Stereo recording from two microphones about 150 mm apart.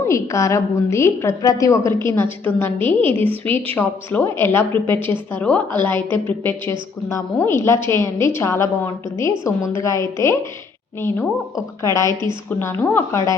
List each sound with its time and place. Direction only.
0.0 s a woman's voice: 20° left (ahead or behind)